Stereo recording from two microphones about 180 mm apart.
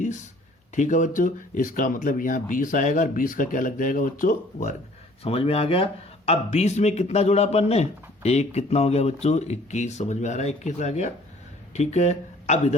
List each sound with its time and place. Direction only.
0.8 s speech: 45° left (ahead or behind)
5.2 s speech: 30° left (ahead or behind)